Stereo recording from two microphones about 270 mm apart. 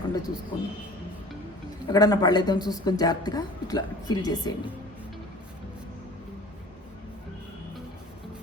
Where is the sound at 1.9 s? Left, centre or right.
Centre.